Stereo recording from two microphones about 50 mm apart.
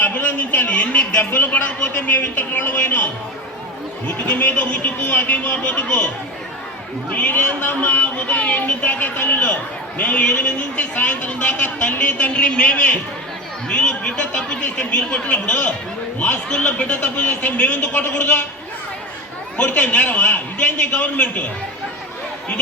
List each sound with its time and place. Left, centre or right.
0.0 s a sound: left
1.3 s speech: left
7.1 s speech: left
18.2 s speech: left
19.5 s speech: left